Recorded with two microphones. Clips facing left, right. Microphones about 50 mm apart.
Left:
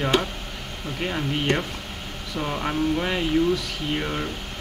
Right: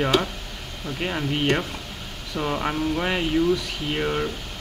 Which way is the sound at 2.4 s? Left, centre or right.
Centre.